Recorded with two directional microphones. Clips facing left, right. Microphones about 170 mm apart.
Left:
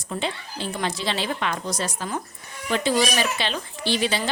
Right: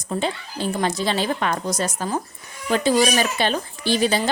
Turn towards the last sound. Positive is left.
turn(degrees=-45)  # may be behind; listen again after turning